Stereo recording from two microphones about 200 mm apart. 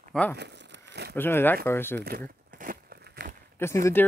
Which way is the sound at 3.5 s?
15° left (ahead or behind).